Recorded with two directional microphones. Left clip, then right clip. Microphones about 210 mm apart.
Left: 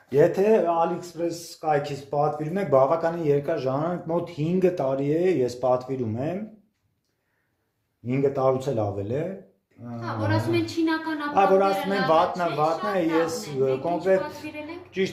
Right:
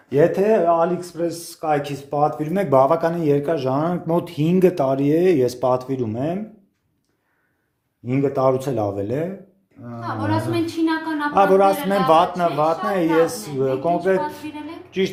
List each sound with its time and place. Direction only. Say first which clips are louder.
0.1 s speech: right 3 dB; 25° right (ahead or behind)
8.0 s a woman's voice: right 4 dB; 30° right (ahead or behind)
10.2 s a woman's voice: right 3 dB; 10° right (ahead or behind)
11.3 s speech: right 4 dB; 35° right (ahead or behind)
14.8 s a sound: right 5 dB; 25° right (ahead or behind)